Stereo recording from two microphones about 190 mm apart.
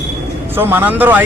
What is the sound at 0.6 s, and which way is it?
Speech, 10° right (ahead or behind).